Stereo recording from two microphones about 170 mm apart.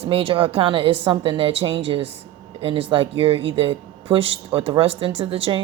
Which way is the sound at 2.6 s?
30° right (ahead or behind).